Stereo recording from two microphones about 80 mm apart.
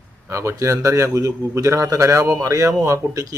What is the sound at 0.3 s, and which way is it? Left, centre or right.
A man's voice, right.